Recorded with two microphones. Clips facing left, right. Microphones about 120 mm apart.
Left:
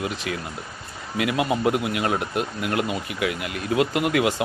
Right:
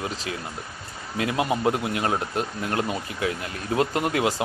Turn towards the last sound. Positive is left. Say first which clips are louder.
# left 2 dB
turn(degrees=-35)  # may be behind; listen again after turning